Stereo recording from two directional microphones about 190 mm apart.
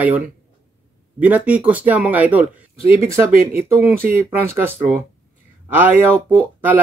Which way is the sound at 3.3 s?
50° right (ahead or behind).